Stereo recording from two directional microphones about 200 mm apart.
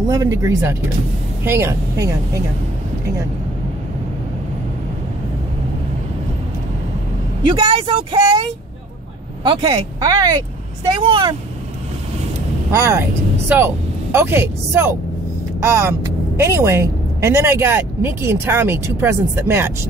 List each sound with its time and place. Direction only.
0.1 s a woman's voice: 15° right (ahead or behind)
7.5 s speech: 25° right (ahead or behind)
12.7 s a woman's voice: 15° right (ahead or behind)